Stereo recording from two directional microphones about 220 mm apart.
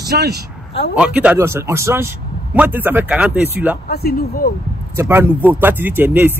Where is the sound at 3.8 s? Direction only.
45° left (ahead or behind).